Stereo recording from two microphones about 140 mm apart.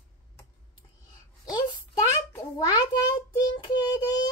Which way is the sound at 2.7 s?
30° left (ahead or behind).